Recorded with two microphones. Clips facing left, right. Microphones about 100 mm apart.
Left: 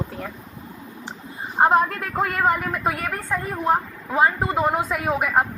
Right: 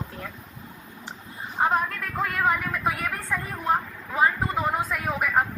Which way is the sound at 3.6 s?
65° left (ahead or behind).